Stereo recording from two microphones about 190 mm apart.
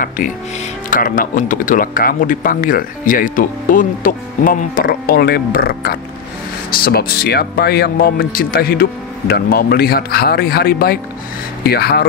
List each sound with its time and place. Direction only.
0.8 s speech: 45° left (ahead or behind)